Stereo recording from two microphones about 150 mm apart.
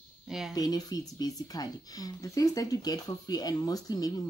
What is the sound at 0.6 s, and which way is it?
Speech, 25° left (ahead or behind).